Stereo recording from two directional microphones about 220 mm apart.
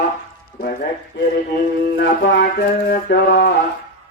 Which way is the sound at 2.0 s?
50° left (ahead or behind).